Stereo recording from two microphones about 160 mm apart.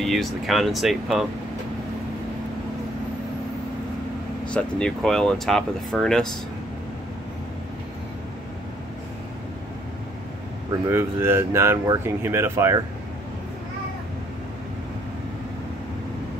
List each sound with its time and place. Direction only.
0.0 s speech: centre (ahead or behind)
4.5 s speech: 5° left (ahead or behind)
10.9 s speech: 15° right (ahead or behind)